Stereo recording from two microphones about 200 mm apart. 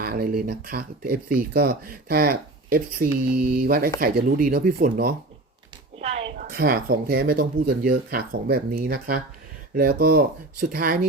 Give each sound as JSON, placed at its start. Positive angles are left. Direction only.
{"t": 0.0, "sound": "speech", "side_deg": -50}
{"t": 6.0, "sound": "a sound", "side_deg": -30}
{"t": 6.5, "sound": "speech", "side_deg": -45}